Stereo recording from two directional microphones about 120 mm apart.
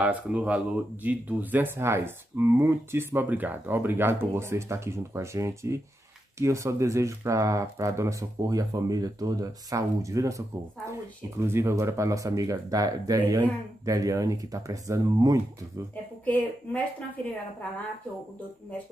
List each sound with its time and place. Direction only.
0.0 s speech: 10° right (ahead or behind); by 15.4 s 30° right (ahead or behind)
16.3 s speech: 15° left (ahead or behind)